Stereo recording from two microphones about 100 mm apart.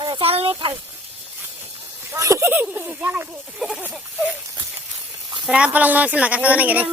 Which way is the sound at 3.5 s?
5° right (ahead or behind).